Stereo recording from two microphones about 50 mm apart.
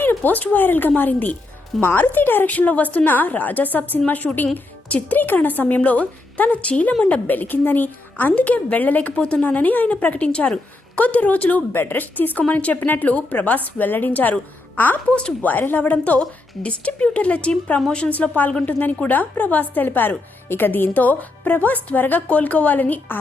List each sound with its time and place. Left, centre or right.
0.2 s a woman's voice: left
15.1 s a woman's voice: left
15.4 s a woman's voice: left; by 18.1 s centre
18.1 s a woman's voice: left